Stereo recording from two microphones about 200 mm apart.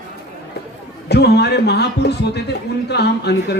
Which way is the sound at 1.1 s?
55° left (ahead or behind).